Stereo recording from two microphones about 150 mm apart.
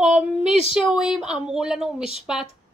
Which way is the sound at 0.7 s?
5° right (ahead or behind).